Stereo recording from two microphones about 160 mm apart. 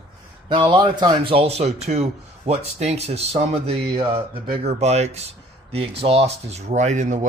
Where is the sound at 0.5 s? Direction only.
30° right (ahead or behind).